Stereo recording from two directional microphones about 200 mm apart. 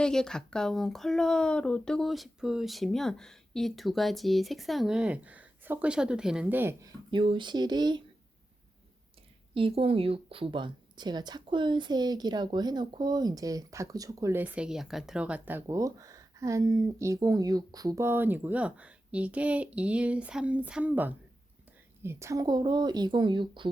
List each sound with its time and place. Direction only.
0.0 s speech: 5° left (ahead or behind)
7.1 s speech: 25° right (ahead or behind)
9.6 s a woman's voice: 25° right (ahead or behind)